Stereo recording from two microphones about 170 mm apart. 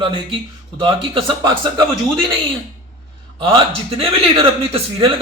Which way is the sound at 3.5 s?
35° right (ahead or behind).